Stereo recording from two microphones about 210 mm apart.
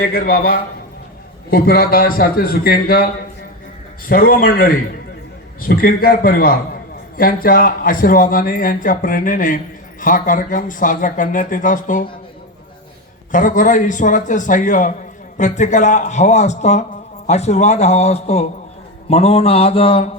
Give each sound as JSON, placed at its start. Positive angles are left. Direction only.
{"t": 0.0, "sound": "a man's voice", "side_deg": 45}
{"t": 4.1, "sound": "a man's voice", "side_deg": 40}
{"t": 13.3, "sound": "a man's voice", "side_deg": 40}
{"t": 19.0, "sound": "mantra", "side_deg": 30}